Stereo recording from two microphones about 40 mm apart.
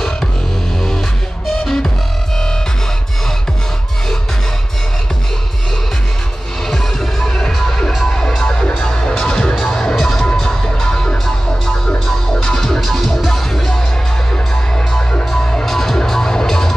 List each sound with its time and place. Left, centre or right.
1.6 s music: centre
6.7 s music: centre
8.5 s music: left
9.0 s music: centre
13.5 s music: centre
15.1 s music: left
15.6 s music: centre